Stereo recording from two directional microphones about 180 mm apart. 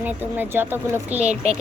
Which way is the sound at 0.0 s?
10° right (ahead or behind).